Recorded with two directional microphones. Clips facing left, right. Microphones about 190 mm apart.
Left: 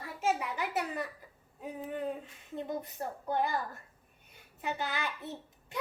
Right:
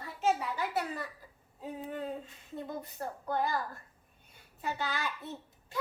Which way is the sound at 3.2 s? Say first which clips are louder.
Even; 20° left (ahead or behind).